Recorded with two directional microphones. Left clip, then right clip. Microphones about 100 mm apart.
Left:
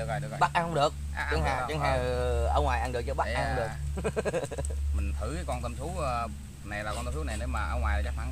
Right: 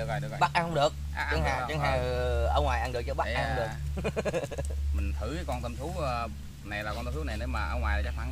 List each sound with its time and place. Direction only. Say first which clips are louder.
0.0 s a sound: even; 5° right (ahead or behind)
0.4 s speech: even; 30° left (ahead or behind)
1.1 s speech: even; 5° right (ahead or behind)
1.7 s speech: left 1 dB; 30° left (ahead or behind)
3.3 s speech: even; centre (ahead or behind)
3.9 s speech: left 1 dB; 30° left (ahead or behind)
5.2 s speech: even; centre (ahead or behind)